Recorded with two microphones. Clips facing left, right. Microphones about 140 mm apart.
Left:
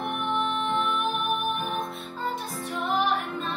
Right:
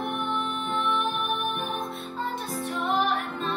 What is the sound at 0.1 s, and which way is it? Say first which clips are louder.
Music: left 2 dB; centre (ahead or behind).